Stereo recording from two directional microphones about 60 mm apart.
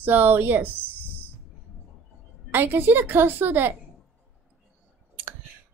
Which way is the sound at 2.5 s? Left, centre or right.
Right.